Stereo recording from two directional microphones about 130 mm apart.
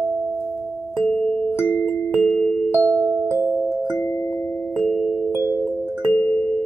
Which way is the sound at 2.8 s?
15° left (ahead or behind).